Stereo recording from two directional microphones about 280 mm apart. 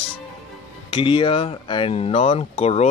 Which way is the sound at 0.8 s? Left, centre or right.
Centre.